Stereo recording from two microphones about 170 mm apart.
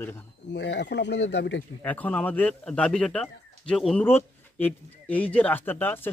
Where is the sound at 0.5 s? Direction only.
90° left.